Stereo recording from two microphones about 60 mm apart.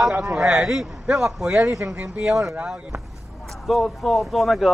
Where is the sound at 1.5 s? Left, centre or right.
Right.